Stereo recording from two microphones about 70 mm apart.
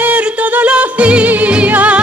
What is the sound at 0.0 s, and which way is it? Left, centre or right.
Music, right.